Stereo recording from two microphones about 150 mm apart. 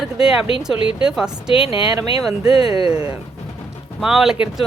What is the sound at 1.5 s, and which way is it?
Speech, 35° left (ahead or behind).